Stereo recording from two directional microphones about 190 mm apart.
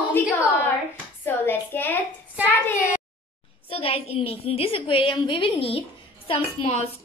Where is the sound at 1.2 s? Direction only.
10° left (ahead or behind).